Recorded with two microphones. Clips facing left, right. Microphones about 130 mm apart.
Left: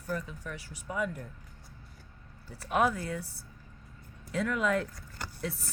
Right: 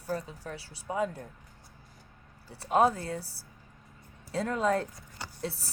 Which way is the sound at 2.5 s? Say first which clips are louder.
Right 3 dB; 30° right (ahead or behind).